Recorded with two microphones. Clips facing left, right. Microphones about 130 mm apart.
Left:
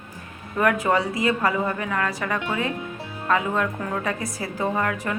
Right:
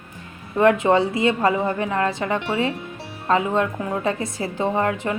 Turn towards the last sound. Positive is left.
turn(degrees=-25)  # may be behind; listen again after turning